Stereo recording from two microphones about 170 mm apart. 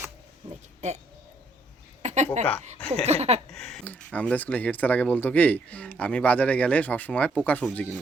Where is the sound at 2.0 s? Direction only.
40° right (ahead or behind).